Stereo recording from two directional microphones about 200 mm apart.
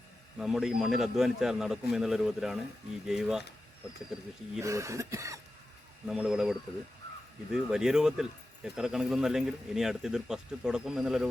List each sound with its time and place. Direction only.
0.3 s speech: centre (ahead or behind)
4.6 s cough: 15° right (ahead or behind)
6.1 s speech: 5° right (ahead or behind)